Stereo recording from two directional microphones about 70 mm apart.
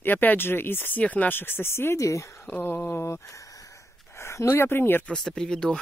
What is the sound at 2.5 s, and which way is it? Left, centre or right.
Speech, left.